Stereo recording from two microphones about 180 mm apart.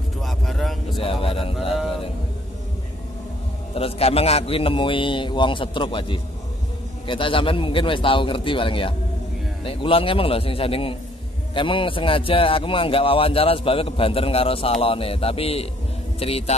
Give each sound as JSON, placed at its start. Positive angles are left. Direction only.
{"t": 0.2, "sound": "vehicle", "side_deg": 0}
{"t": 1.0, "sound": "a sound", "side_deg": 30}
{"t": 3.7, "sound": "a man's voice", "side_deg": 35}